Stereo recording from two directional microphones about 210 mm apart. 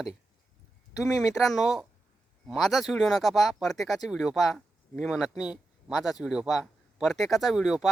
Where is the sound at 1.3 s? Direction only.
Centre (ahead or behind).